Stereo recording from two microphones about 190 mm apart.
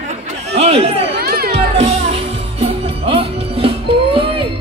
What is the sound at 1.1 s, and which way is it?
Music, 55° right (ahead or behind).